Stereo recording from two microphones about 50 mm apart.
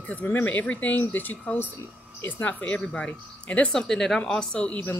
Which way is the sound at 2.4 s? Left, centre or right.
Left.